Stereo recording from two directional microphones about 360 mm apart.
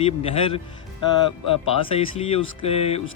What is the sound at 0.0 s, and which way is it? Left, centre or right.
Speech, centre.